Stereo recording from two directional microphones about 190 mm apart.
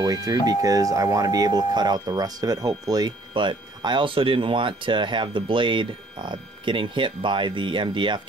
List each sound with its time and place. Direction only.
0.0 s speech: 20° right (ahead or behind)